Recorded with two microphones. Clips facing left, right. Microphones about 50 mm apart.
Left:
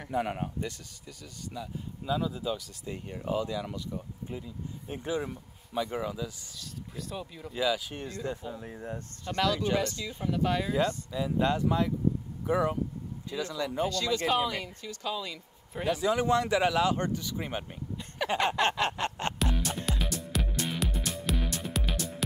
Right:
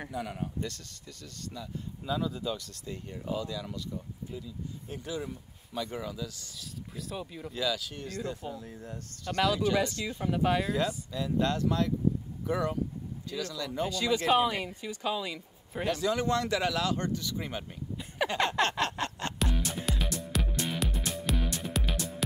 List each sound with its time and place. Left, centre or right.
0.1 s speech: left
0.6 s speech: centre
3.3 s speech: left
6.6 s speech: centre
7.5 s speech: centre
10.2 s a woman's voice: centre
10.7 s speech: centre
11.1 s speech: centre
13.8 s a woman's voice: centre
15.7 s speech: centre
16.0 s speech: centre
17.9 s a sound: centre
18.3 s speech: centre
19.3 s music: centre